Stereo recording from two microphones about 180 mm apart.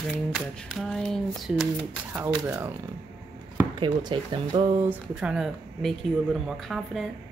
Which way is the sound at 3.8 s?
25° right (ahead or behind).